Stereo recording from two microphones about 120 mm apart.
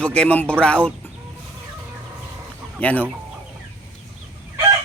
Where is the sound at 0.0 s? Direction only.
10° left (ahead or behind).